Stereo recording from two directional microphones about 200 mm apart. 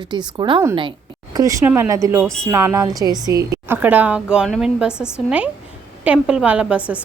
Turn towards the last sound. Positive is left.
turn(degrees=-5)  # may be behind; listen again after turning